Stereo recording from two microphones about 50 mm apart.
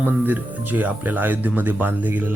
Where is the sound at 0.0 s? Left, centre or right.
Right.